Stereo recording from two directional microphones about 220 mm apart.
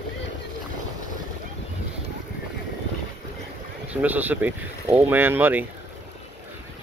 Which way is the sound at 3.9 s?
5° right (ahead or behind).